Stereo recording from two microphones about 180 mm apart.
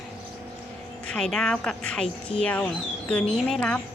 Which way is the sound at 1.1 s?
5° left (ahead or behind).